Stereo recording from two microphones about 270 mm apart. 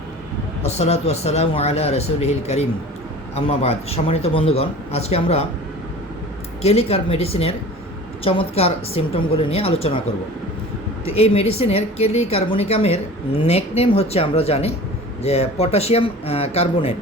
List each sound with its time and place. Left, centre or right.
0.6 s a man's voice: left
6.6 s a man's voice: left
11.0 s a man's voice: left